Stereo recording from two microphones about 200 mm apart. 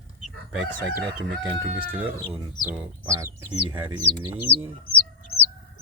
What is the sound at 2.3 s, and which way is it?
Speech, 10° right (ahead or behind).